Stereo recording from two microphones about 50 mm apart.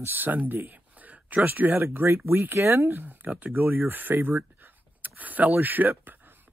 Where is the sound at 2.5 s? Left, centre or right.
Right.